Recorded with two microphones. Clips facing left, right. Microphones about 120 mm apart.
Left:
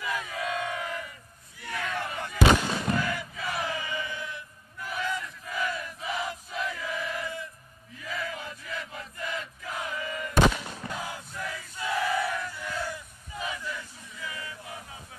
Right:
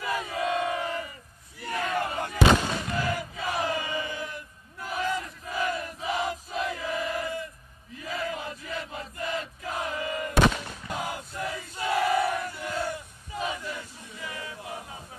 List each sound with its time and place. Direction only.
0.0 s crowd: 35° right (ahead or behind)
3.0 s battle cry: 35° right (ahead or behind)
10.9 s a sound: 20° right (ahead or behind)
11.3 s battle cry: 35° right (ahead or behind)
12.1 s battle cry: 20° right (ahead or behind)
14.2 s a sound: 30° right (ahead or behind)